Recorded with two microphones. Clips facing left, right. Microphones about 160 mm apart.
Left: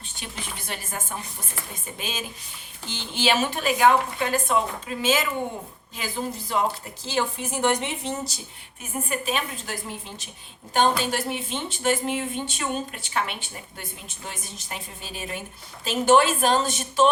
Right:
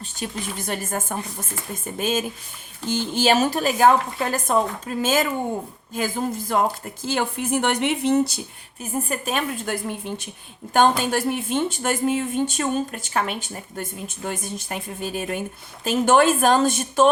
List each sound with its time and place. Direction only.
0.2 s speech: 45° right (ahead or behind); by 8.4 s 65° right (ahead or behind)
8.8 s speech: 45° right (ahead or behind)
10.8 s speech: 50° right (ahead or behind)